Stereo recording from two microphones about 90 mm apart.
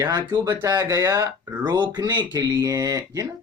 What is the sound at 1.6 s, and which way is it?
Speech, 50° right (ahead or behind).